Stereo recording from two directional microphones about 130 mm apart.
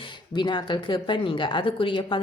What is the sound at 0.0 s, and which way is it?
Speech, 35° left (ahead or behind).